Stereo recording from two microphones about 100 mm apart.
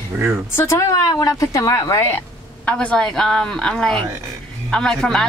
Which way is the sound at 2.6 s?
10° left (ahead or behind).